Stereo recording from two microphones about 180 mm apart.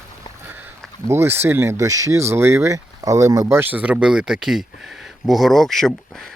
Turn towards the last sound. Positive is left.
turn(degrees=0)  # may be behind; listen again after turning